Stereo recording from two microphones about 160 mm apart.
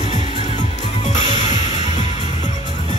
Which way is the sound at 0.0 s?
45° left (ahead or behind).